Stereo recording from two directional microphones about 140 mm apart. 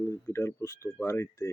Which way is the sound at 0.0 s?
20° left (ahead or behind).